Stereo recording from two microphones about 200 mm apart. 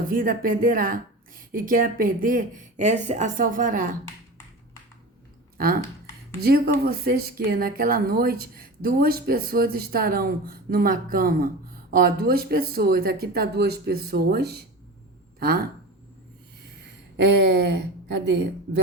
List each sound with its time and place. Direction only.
0.1 s a woman's voice: 45° right (ahead or behind)
6.4 s a woman's voice: 50° right (ahead or behind)
16.6 s speech: 60° right (ahead or behind)